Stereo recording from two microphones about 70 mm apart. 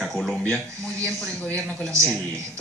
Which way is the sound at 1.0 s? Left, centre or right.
Centre.